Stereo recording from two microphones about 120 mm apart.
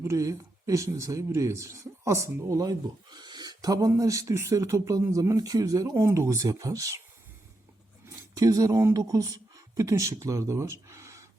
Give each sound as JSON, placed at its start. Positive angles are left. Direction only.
{"t": 0.0, "sound": "speech", "side_deg": -25}
{"t": 8.0, "sound": "speech", "side_deg": -30}